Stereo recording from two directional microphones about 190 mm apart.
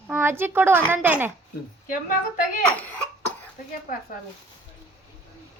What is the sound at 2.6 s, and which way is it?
Speech, 10° left (ahead or behind).